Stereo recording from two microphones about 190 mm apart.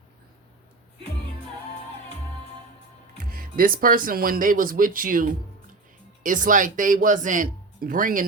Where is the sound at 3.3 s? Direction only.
50° right (ahead or behind).